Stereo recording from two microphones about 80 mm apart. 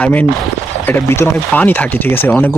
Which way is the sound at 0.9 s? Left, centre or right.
Left.